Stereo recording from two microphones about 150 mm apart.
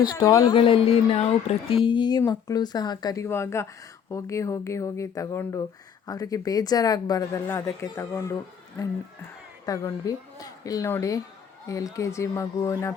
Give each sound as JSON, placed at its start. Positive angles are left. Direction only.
{"t": 0.2, "sound": "speech", "side_deg": 20}
{"t": 0.5, "sound": "speech", "side_deg": 35}
{"t": 9.6, "sound": "speech", "side_deg": 25}